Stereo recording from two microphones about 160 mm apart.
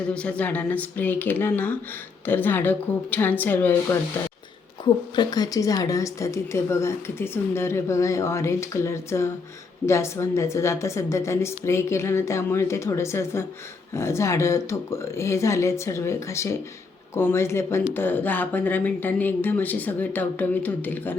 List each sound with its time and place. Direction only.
0.1 s speech: 5° left (ahead or behind)
5.1 s speech: 25° left (ahead or behind)